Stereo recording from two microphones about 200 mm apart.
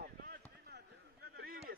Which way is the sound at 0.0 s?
45° right (ahead or behind).